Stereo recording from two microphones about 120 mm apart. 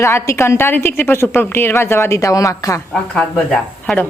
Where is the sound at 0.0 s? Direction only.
20° left (ahead or behind).